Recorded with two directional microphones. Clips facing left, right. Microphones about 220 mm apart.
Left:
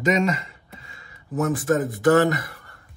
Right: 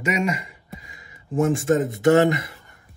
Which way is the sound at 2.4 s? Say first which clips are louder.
Even; 20° right (ahead or behind).